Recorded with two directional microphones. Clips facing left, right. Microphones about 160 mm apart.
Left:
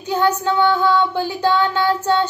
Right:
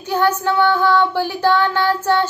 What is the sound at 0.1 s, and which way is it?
Child singing, 20° left (ahead or behind).